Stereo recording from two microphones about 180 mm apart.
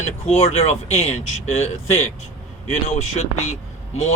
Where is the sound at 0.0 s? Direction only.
40° left (ahead or behind).